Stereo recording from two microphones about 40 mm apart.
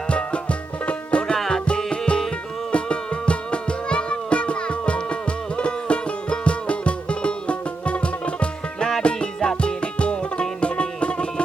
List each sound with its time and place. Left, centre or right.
0.1 s music: left